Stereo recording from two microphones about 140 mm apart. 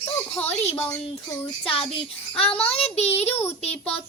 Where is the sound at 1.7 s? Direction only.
40° left (ahead or behind).